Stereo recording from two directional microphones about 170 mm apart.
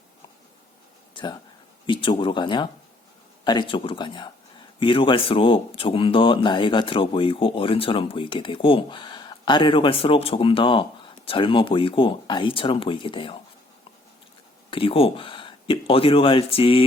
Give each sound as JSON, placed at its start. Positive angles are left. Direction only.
{"t": 1.1, "sound": "a sound", "side_deg": 25}
{"t": 1.9, "sound": "speech", "side_deg": 30}
{"t": 14.7, "sound": "speech", "side_deg": 30}